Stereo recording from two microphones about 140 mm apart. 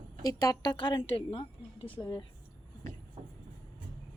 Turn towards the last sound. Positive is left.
turn(degrees=-45)  # may be behind; listen again after turning